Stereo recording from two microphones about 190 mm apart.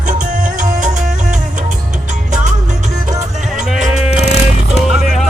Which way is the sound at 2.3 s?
40° right (ahead or behind).